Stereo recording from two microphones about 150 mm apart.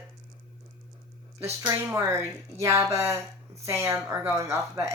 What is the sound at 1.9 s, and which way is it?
A woman's voice, 20° right (ahead or behind).